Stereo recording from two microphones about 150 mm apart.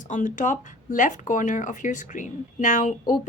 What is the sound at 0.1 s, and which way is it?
A woman's voice, 55° left (ahead or behind).